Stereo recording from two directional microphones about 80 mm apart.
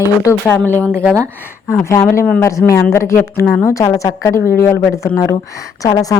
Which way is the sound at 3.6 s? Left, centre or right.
Left.